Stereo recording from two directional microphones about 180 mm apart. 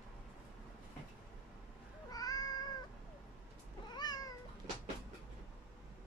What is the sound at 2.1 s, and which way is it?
Cat, 20° left (ahead or behind).